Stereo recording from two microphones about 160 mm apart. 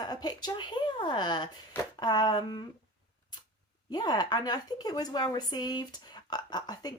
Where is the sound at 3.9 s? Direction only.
25° left (ahead or behind).